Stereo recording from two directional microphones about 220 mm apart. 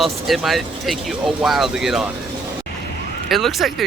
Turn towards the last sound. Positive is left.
turn(degrees=0)  # may be behind; listen again after turning